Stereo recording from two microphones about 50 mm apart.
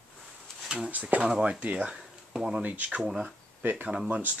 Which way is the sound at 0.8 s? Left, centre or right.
Right.